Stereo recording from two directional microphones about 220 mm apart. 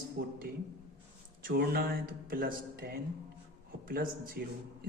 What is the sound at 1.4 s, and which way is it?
Speech, 45° right (ahead or behind).